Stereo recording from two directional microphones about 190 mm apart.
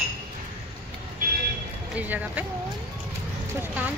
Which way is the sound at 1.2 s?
45° right (ahead or behind).